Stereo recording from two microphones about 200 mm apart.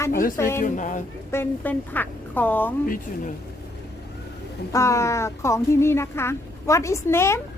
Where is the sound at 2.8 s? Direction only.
45° left (ahead or behind).